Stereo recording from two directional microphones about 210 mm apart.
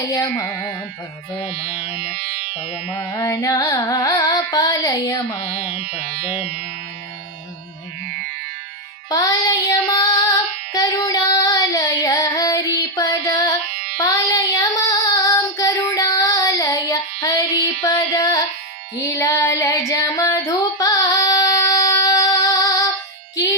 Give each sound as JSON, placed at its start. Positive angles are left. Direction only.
{"t": 0.1, "sound": "music", "side_deg": 15}
{"t": 2.0, "sound": "music", "side_deg": -45}
{"t": 3.2, "sound": "music", "side_deg": 15}
{"t": 5.7, "sound": "music", "side_deg": -45}
{"t": 9.0, "sound": "child singing", "side_deg": 15}
{"t": 13.0, "sound": "music", "side_deg": 15}
{"t": 14.0, "sound": "child singing", "side_deg": 15}
{"t": 17.8, "sound": "music", "side_deg": 15}
{"t": 18.9, "sound": "female singing", "side_deg": 15}
{"t": 23.3, "sound": "music", "side_deg": 15}